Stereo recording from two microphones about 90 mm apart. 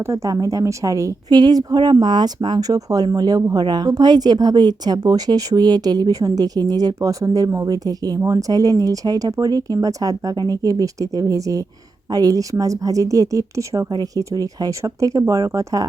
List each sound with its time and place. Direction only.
0.0 s a woman's voice: 35° right (ahead or behind)